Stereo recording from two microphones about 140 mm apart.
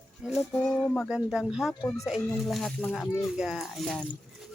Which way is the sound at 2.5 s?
5° left (ahead or behind).